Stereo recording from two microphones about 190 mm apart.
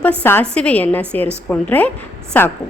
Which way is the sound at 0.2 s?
10° left (ahead or behind).